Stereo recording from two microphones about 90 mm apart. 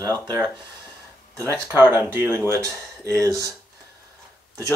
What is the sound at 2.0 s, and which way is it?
Speech, 25° right (ahead or behind).